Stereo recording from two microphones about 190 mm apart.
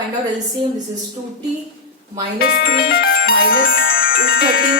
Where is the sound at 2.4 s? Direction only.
55° left (ahead or behind).